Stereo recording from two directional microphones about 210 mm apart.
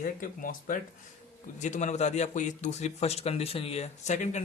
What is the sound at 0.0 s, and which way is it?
A man's voice, 40° left (ahead or behind).